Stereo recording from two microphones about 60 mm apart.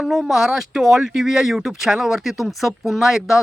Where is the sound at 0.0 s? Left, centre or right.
Centre.